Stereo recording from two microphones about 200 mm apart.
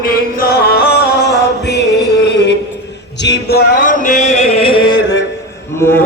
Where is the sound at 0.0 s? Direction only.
45° left (ahead or behind).